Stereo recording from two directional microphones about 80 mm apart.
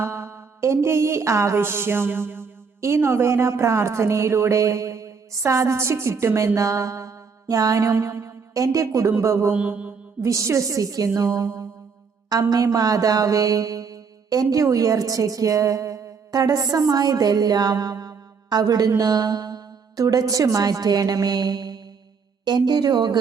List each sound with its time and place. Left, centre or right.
0.0 s a sound: right
9.5 s mantra: centre
10.2 s a woman's voice: right
12.3 s mantra: right
18.4 s speech: right